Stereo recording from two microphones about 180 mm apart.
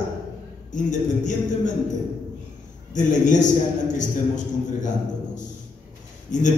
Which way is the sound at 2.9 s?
45° left (ahead or behind).